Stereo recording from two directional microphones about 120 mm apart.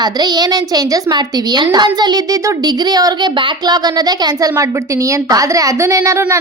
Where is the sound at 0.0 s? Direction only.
35° right (ahead or behind).